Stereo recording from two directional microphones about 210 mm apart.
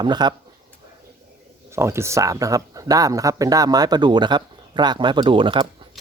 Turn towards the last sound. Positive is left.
turn(degrees=-25)  # may be behind; listen again after turning